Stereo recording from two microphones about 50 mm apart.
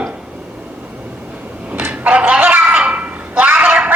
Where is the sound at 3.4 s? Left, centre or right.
Right.